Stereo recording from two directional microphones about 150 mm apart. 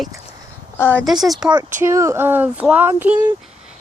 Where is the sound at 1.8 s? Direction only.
20° right (ahead or behind).